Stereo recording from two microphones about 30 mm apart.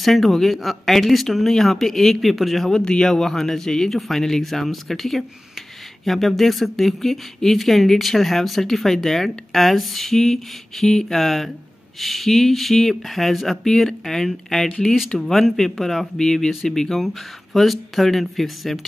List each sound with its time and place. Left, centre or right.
0.0 s speech: centre
2.7 s speech: left
3.1 s speech: centre
16.9 s speech: centre